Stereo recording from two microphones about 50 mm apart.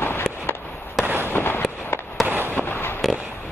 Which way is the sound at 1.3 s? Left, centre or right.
Left.